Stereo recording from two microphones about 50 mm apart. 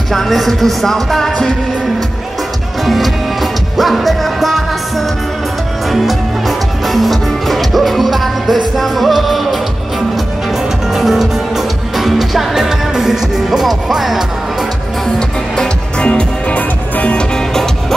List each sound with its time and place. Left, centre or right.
0.1 s music: centre
2.8 s music: centre
10.9 s music: centre
15.1 s music: centre